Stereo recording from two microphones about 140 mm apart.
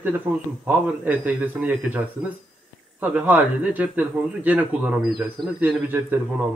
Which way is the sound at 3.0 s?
10° right (ahead or behind).